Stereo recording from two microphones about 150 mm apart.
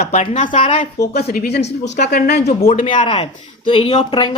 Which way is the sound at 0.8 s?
90° left.